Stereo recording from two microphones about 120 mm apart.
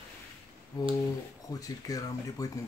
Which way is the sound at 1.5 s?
30° left (ahead or behind).